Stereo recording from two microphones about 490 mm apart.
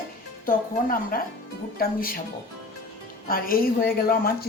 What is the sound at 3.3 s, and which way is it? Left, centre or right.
Speech, centre.